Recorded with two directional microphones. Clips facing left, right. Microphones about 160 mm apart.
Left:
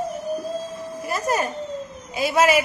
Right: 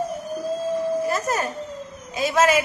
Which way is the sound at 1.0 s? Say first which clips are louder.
Even; 10° left (ahead or behind).